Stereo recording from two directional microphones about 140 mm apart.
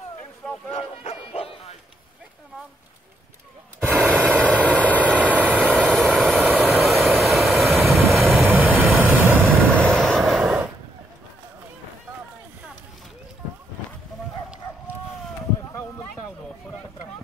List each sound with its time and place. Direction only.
0.7 s bow-wow: 50° left (ahead or behind)
3.8 s gasp: 10° right (ahead or behind)
4.6 s vehicle: 10° right (ahead or behind)
5.9 s vehicle: centre (ahead or behind)
8.5 s vehicle: 10° right (ahead or behind)
9.7 s vehicle: 5° left (ahead or behind)